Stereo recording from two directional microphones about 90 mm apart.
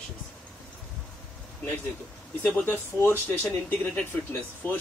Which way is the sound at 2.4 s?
20° left (ahead or behind).